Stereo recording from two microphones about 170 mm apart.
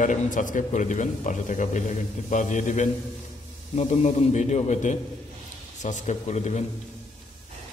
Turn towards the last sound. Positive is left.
turn(degrees=40)  # may be behind; listen again after turning